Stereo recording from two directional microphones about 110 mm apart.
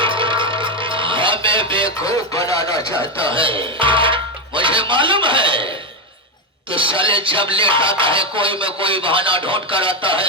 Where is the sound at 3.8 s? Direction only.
50° right (ahead or behind).